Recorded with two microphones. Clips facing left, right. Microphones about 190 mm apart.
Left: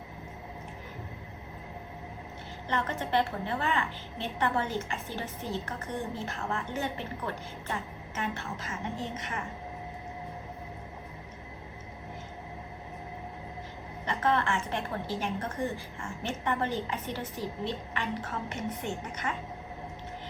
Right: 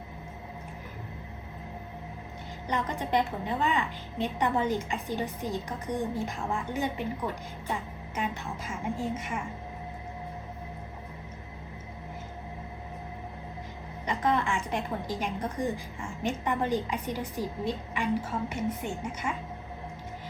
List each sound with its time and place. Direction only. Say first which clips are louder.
2.6 s a woman's voice: right 1 dB; 15° right (ahead or behind)
14.0 s a woman's voice: right 1 dB; 15° right (ahead or behind)